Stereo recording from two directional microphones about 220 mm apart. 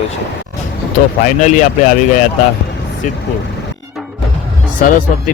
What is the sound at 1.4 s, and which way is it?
Speech, 35° left (ahead or behind).